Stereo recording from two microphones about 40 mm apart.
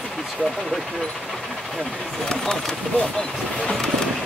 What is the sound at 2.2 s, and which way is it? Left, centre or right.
Speech, centre.